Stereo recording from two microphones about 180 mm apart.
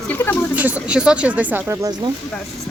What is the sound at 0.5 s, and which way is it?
Speech, 10° right (ahead or behind).